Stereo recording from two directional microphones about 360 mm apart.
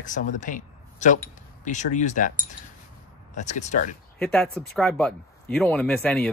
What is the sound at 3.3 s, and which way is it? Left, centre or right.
Speech, centre.